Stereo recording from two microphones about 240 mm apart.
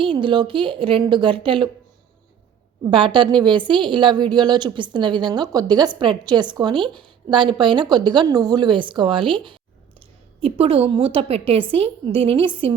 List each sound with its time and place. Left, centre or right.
0.0 s a woman's voice: right
2.9 s a woman's voice: centre